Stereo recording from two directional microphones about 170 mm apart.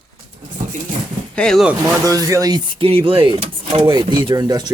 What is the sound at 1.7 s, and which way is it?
Speech, 20° right (ahead or behind).